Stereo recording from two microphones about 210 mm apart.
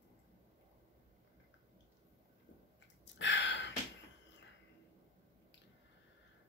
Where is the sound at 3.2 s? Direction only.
60° left (ahead or behind).